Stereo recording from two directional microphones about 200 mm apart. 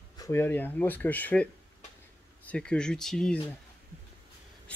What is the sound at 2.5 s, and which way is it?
Speech, 5° left (ahead or behind).